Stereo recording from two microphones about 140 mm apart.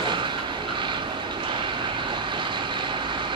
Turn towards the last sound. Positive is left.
turn(degrees=-35)  # may be behind; listen again after turning